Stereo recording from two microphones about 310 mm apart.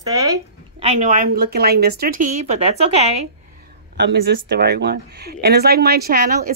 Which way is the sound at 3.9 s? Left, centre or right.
Right.